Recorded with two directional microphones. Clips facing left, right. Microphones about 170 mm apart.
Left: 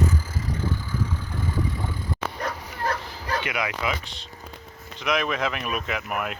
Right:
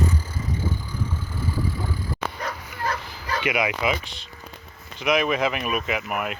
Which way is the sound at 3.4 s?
15° right (ahead or behind).